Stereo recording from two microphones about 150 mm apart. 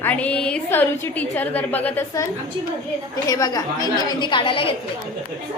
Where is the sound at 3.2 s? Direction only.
25° left (ahead or behind).